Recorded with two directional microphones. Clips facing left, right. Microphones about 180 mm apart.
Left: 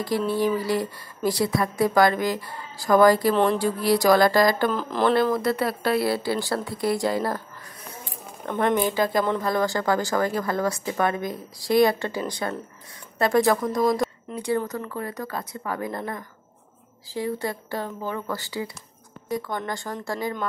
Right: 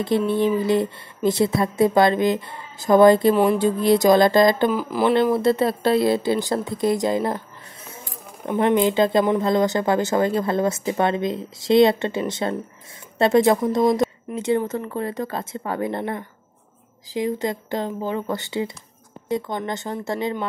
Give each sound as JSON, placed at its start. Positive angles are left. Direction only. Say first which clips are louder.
{"t": 0.3, "sound": "speech", "louder": "right 3 dB", "side_deg": -20}
{"t": 4.7, "sound": "speech", "louder": "right 2 dB", "side_deg": -10}
{"t": 5.1, "sound": "speech", "louder": "right 4 dB", "side_deg": -25}
{"t": 8.5, "sound": "speech", "louder": "right 4 dB", "side_deg": -15}
{"t": 17.1, "sound": "speech", "louder": "right 4 dB", "side_deg": -15}